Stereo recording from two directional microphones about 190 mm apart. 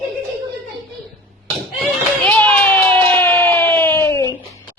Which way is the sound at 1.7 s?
5° left (ahead or behind).